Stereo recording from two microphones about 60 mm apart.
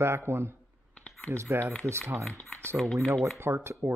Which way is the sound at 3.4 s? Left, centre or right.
Right.